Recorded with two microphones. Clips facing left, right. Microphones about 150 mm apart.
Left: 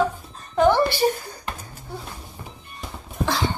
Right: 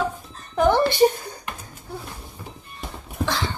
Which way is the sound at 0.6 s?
15° right (ahead or behind).